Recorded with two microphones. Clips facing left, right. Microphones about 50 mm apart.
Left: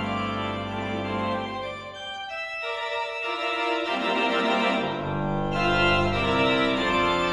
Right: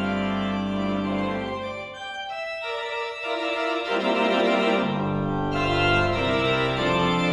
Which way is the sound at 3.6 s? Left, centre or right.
Left.